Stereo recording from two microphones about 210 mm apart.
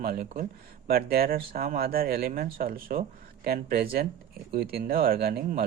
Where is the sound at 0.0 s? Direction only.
45° right (ahead or behind).